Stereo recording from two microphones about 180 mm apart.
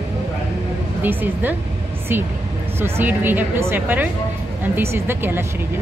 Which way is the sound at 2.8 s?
10° right (ahead or behind).